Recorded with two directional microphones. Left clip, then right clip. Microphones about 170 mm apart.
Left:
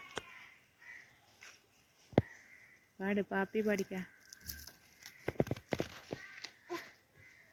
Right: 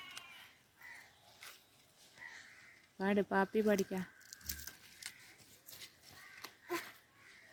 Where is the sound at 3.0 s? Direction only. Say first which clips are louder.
Right 2 dB; 25° right (ahead or behind).